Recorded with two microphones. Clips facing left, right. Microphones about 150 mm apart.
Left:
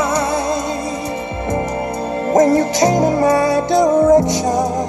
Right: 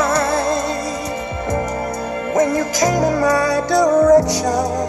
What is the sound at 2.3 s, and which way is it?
Music, 35° left (ahead or behind).